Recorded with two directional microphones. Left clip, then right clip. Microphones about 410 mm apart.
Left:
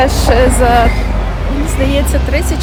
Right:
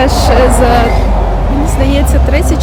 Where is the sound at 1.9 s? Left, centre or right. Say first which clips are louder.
Right 2 dB; centre.